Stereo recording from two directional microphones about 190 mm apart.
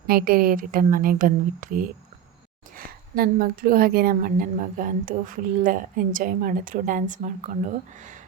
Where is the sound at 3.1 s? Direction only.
50° right (ahead or behind).